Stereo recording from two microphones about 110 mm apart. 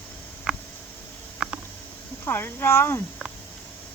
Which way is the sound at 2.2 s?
20° left (ahead or behind).